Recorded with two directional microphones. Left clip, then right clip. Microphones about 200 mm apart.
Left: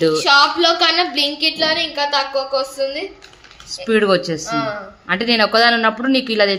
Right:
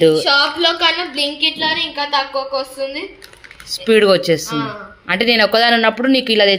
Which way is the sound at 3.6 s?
10° right (ahead or behind).